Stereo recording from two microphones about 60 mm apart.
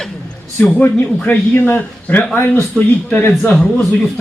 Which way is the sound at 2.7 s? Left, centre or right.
Centre.